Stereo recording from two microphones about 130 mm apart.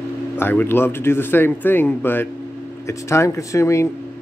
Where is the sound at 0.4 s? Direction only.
15° left (ahead or behind).